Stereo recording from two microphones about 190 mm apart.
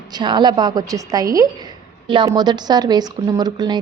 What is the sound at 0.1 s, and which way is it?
A woman's voice, 25° right (ahead or behind).